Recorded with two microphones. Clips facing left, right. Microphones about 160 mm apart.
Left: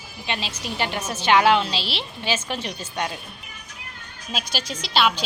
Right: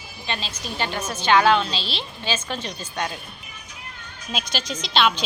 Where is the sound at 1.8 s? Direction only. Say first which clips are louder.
Left 1 dB; 75° left (ahead or behind).